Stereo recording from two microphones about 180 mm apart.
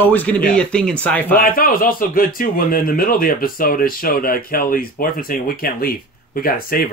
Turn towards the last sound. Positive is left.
turn(degrees=55)  # may be behind; listen again after turning